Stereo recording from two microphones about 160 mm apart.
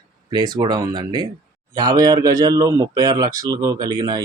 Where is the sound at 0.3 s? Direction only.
25° right (ahead or behind).